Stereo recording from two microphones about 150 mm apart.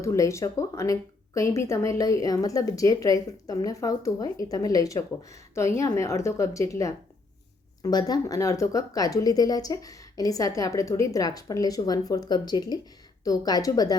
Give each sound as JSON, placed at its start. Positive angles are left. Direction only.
{"t": 0.0, "sound": "speech", "side_deg": 20}